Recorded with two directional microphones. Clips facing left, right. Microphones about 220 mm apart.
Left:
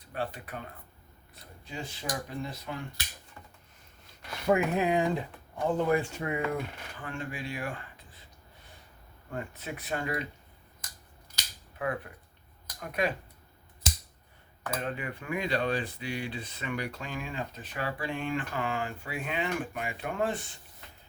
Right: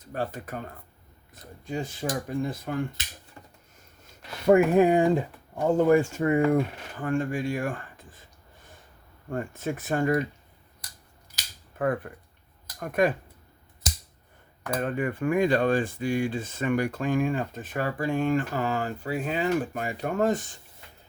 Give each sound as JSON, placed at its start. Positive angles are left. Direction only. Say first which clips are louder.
{"t": 0.0, "sound": "speech", "louder": "right 4 dB", "side_deg": -45}
{"t": 4.4, "sound": "speech", "louder": "right 8 dB", "side_deg": -50}
{"t": 9.3, "sound": "speech", "louder": "right 7 dB", "side_deg": -45}
{"t": 11.8, "sound": "speech", "louder": "right 6 dB", "side_deg": -50}
{"t": 14.7, "sound": "speech", "louder": "right 7 dB", "side_deg": -50}